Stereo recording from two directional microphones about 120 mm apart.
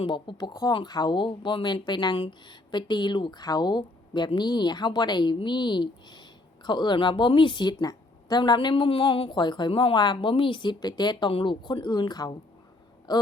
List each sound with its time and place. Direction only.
0.0 s a woman's voice: 40° left (ahead or behind)